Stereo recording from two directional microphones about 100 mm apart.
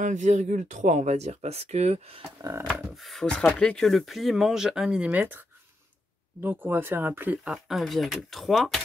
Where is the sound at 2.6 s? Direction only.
10° right (ahead or behind).